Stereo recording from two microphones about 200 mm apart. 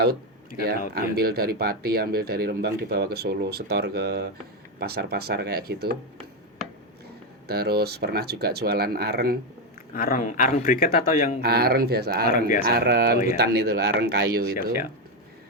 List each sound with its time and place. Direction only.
0.6 s speech: 50° right (ahead or behind)
7.4 s speech: 50° right (ahead or behind)
9.9 s a man's voice: 45° left (ahead or behind)
11.3 s speech: 50° right (ahead or behind)
12.3 s a man's voice: 45° left (ahead or behind)
12.6 s speech: 55° right (ahead or behind)